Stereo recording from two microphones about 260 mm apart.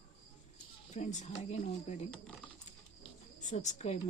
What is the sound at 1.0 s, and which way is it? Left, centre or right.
Speech, left.